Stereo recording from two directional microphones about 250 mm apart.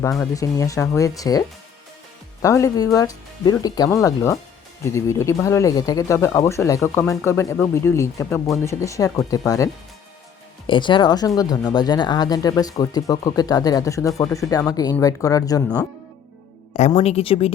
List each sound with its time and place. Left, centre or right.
0.1 s speech: centre
10.7 s a woman's voice: centre
16.7 s a woman's voice: left